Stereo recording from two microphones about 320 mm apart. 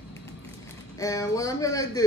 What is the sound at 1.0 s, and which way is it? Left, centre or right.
A woman's voice, centre.